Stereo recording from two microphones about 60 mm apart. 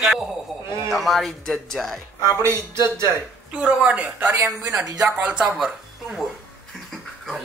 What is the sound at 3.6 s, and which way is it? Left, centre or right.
Speech, centre.